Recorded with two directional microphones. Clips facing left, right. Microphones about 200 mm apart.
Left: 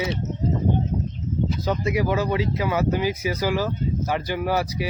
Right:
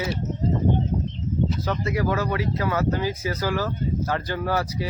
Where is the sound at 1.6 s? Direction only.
15° left (ahead or behind).